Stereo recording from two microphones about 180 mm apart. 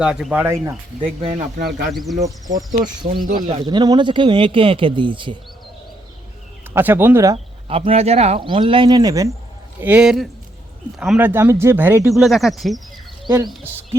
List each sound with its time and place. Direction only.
0.0 s speech: 5° right (ahead or behind)
0.4 s speech: 15° right (ahead or behind)
1.3 s speech: 55° right (ahead or behind)
1.9 s speech: centre (ahead or behind)
2.1 s a man's voice: 20° right (ahead or behind)
3.3 s a man's voice: 30° right (ahead or behind)
6.7 s speech: 10° right (ahead or behind)
7.3 s a man's voice: 30° right (ahead or behind)
9.8 s speech: 5° right (ahead or behind)
12.1 s speech: centre (ahead or behind)
13.2 s speech: 25° right (ahead or behind)